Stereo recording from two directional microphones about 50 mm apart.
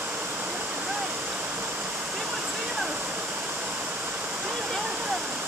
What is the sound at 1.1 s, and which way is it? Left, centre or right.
Waterfall, right.